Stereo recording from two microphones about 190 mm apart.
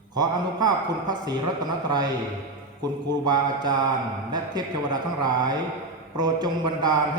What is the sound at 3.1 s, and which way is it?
A man's voice, 20° right (ahead or behind).